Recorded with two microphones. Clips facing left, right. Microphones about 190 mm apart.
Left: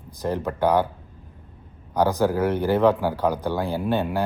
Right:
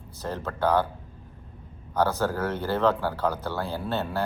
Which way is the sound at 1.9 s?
15° left (ahead or behind).